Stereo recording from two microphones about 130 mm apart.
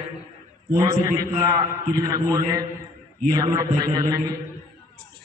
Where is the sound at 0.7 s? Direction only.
30° right (ahead or behind).